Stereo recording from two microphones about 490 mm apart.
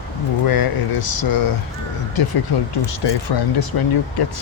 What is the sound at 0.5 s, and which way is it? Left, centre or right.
Speech, left.